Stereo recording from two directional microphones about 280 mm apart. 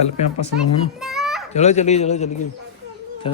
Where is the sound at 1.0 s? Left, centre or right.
Centre.